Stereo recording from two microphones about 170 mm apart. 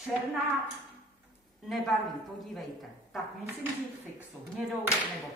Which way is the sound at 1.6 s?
Centre (ahead or behind).